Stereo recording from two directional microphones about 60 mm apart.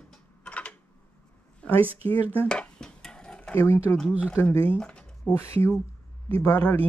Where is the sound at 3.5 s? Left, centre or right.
Left.